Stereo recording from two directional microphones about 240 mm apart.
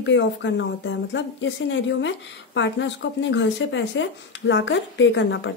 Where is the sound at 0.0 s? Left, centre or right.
Left.